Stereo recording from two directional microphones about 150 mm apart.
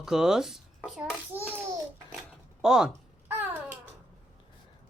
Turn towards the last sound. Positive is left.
turn(degrees=-10)  # may be behind; listen again after turning